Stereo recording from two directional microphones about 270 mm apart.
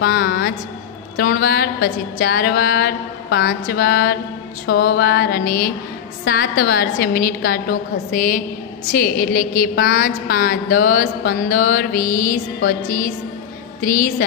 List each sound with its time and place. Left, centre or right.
0.0 s a woman's voice: left